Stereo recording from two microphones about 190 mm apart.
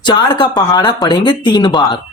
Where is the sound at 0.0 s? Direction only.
25° left (ahead or behind).